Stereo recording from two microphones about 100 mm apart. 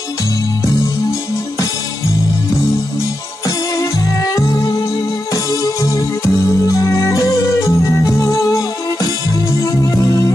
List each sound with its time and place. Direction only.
3.4 s music: 40° left (ahead or behind)